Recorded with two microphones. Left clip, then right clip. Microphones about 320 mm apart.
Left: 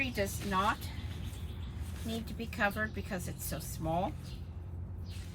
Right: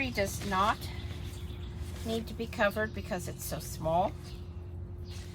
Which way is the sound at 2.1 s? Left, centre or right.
Centre.